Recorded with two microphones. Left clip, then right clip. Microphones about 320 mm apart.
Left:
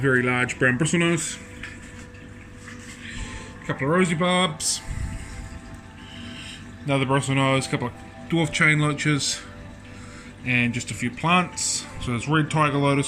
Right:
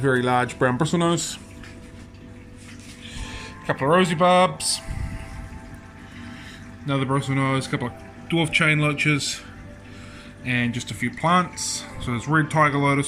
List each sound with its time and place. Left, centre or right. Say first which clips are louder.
0.0 s speech: right 1 dB; right
3.9 s speech: right 5 dB; centre
6.8 s speech: left 2 dB; centre
10.4 s speech: left 2 dB; centre